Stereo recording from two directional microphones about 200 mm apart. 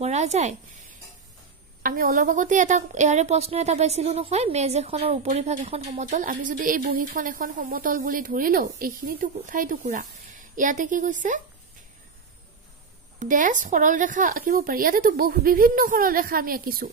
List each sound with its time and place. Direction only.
0.0 s speech: 35° right (ahead or behind)
13.2 s speech: 40° right (ahead or behind)